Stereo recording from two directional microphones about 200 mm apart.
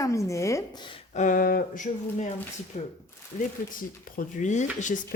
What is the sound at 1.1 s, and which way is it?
Speech, 40° left (ahead or behind).